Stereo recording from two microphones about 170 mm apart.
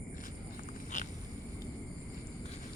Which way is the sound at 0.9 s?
45° left (ahead or behind).